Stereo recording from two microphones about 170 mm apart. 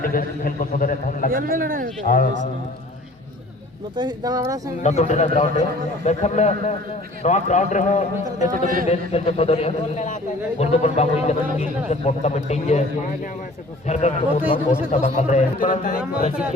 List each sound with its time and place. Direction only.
0.0 s a man's voice: 55° left (ahead or behind)
1.3 s speech: 60° right (ahead or behind)
3.9 s speech: 25° right (ahead or behind)
4.8 s a man's voice: 45° left (ahead or behind)
8.5 s speech: 55° right (ahead or behind)
8.9 s a man's voice: 40° left (ahead or behind)
13.8 s a man's voice: 40° left (ahead or behind)